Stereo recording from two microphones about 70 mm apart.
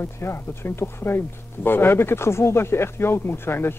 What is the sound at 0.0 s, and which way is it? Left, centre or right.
Speech, left.